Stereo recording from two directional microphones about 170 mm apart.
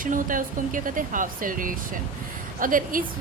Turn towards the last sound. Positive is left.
turn(degrees=-55)  # may be behind; listen again after turning